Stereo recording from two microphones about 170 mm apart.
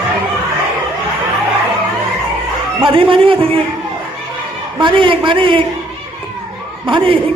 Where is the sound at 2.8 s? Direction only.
30° right (ahead or behind).